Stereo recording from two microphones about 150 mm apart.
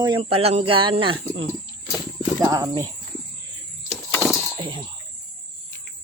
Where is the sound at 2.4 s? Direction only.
25° right (ahead or behind).